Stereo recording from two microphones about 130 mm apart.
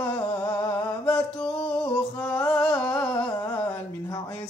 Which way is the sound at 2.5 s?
10° left (ahead or behind).